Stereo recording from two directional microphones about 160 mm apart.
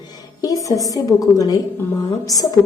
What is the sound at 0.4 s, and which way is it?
A woman's voice, 20° left (ahead or behind).